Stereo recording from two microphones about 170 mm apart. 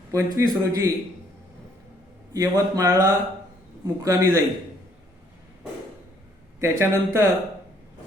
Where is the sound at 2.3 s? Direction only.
20° right (ahead or behind).